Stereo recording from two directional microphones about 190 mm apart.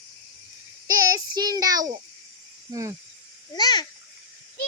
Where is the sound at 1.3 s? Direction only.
20° right (ahead or behind).